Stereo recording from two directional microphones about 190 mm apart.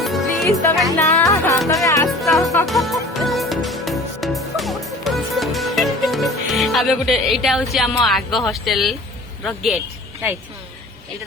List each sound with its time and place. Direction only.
0.0 s music: centre (ahead or behind)
0.9 s music: 15° left (ahead or behind)
2.6 s music: centre (ahead or behind)
8.0 s speech: centre (ahead or behind)